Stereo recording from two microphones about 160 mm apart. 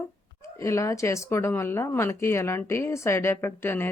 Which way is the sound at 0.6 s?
20° left (ahead or behind).